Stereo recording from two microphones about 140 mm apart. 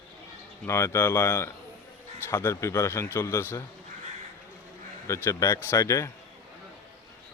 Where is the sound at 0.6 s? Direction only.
20° left (ahead or behind).